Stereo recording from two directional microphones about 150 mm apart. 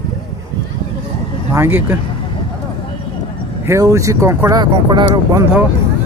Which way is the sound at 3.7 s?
20° right (ahead or behind).